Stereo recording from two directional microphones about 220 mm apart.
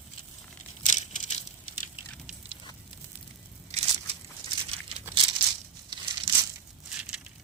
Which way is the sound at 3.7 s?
30° right (ahead or behind).